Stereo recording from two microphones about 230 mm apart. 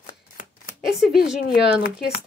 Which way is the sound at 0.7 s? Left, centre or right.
Centre.